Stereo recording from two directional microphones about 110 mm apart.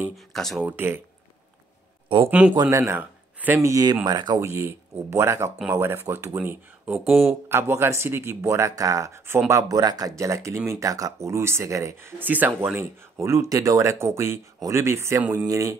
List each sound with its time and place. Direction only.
0.1 s speech: centre (ahead or behind)
0.7 s speech: 20° right (ahead or behind)
2.2 s speech: 15° right (ahead or behind)
2.7 s speech: 25° right (ahead or behind)
3.5 s speech: 30° right (ahead or behind)
4.0 s speech: 40° right (ahead or behind)
4.4 s speech: 25° right (ahead or behind)